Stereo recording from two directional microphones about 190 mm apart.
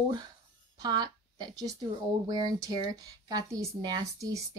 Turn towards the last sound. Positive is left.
turn(degrees=-20)  # may be behind; listen again after turning